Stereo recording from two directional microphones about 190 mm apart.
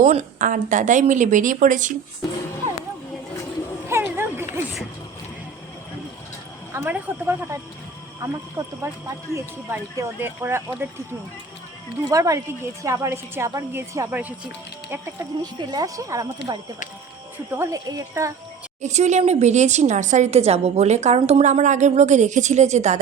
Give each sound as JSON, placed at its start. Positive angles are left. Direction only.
{"t": 0.0, "sound": "speech", "side_deg": -35}
{"t": 2.6, "sound": "a sound", "side_deg": -35}
{"t": 3.8, "sound": "a sound", "side_deg": -10}
{"t": 6.7, "sound": "a woman's voice", "side_deg": -10}
{"t": 12.1, "sound": "a woman's voice", "side_deg": -15}
{"t": 17.5, "sound": "a woman's voice", "side_deg": -15}
{"t": 18.8, "sound": "speech", "side_deg": -35}